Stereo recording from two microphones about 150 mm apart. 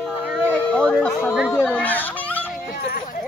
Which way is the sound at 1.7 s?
10° left (ahead or behind).